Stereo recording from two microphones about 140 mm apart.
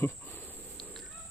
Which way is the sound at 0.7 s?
Centre (ahead or behind).